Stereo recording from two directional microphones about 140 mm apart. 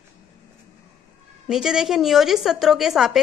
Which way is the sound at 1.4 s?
5° right (ahead or behind).